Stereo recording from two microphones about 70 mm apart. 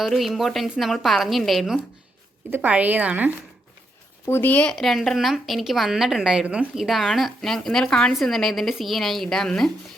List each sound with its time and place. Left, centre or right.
0.0 s a woman's voice: centre
2.5 s speech: right
4.3 s speech: left
4.7 s a woman's voice: centre
6.7 s a woman's voice: centre